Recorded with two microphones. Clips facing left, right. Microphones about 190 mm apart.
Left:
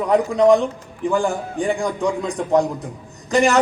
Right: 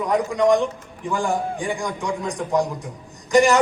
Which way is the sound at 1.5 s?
60° left (ahead or behind).